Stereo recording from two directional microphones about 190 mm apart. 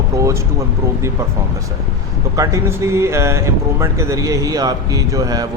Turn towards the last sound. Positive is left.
turn(degrees=-20)  # may be behind; listen again after turning